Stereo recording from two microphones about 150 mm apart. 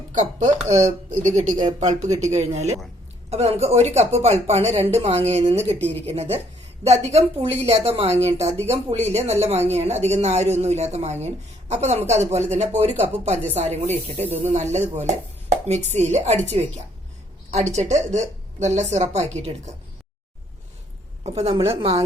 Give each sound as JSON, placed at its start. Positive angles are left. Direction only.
{"t": 0.1, "sound": "speech", "side_deg": -55}
{"t": 2.1, "sound": "speech", "side_deg": -50}
{"t": 21.2, "sound": "speech", "side_deg": -45}